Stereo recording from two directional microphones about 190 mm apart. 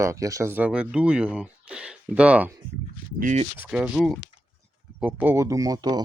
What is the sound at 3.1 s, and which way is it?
Speech, 40° right (ahead or behind).